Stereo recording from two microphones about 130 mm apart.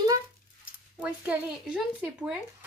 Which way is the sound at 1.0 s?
10° right (ahead or behind).